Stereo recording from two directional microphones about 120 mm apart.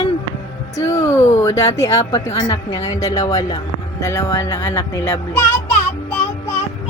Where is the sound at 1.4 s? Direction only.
25° left (ahead or behind).